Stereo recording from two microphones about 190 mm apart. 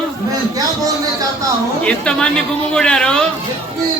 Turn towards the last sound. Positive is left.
turn(degrees=5)  # may be behind; listen again after turning